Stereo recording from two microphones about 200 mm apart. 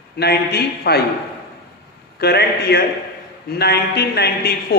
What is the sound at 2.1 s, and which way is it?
A man's voice, 55° left (ahead or behind).